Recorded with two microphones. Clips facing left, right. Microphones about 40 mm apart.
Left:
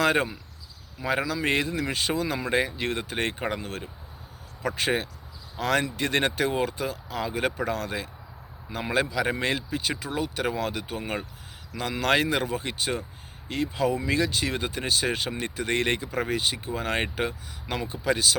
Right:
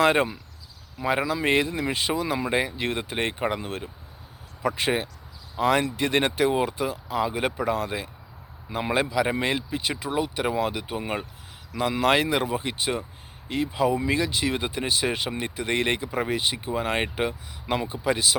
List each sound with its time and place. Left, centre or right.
0.0 s speech: centre